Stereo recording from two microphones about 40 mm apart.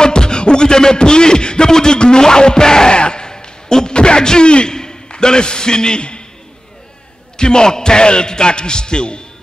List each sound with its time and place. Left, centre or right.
0.0 s music: left
7.3 s a man's voice: centre